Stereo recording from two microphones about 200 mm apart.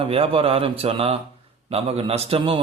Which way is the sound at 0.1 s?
30° right (ahead or behind).